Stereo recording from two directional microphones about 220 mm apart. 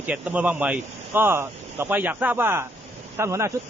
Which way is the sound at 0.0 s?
5° right (ahead or behind).